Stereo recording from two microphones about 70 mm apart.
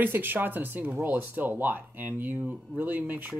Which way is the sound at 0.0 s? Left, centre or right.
Right.